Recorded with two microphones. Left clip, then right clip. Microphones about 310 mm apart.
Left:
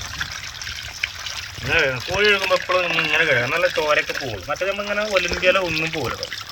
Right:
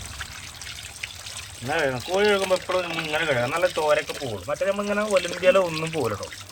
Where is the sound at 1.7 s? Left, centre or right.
Centre.